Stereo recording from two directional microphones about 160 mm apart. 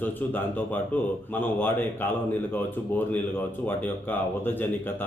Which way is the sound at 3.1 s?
10° left (ahead or behind).